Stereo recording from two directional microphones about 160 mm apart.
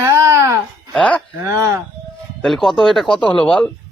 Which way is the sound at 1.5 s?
20° right (ahead or behind).